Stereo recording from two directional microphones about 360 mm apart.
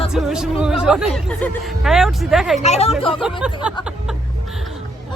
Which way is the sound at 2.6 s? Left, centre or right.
Centre.